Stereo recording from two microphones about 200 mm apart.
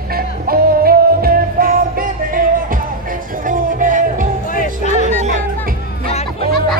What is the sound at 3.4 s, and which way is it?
Music, 40° right (ahead or behind).